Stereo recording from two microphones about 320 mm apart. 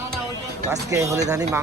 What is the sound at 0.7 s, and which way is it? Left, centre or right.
Speech, centre.